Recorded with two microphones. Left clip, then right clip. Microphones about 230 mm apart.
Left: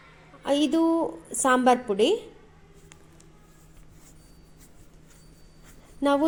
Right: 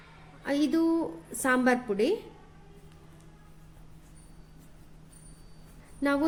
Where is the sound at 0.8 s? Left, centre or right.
Centre.